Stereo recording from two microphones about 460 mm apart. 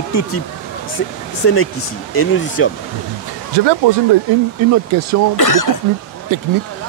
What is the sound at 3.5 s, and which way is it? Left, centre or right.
Speech, right.